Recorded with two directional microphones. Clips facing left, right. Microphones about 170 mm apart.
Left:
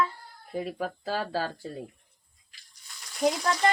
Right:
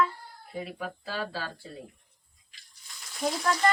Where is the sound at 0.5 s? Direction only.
40° left (ahead or behind).